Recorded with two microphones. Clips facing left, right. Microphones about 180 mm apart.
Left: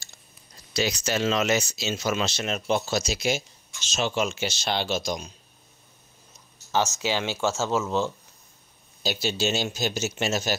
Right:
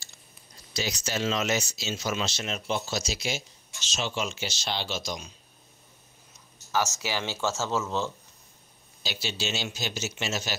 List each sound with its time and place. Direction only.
0.7 s speech: 65° left (ahead or behind); by 5.3 s 50° left (ahead or behind)
7.0 s speech: 20° left (ahead or behind)
9.0 s speech: 45° left (ahead or behind)